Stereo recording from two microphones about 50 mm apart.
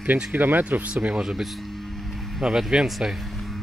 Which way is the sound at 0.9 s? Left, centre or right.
Right.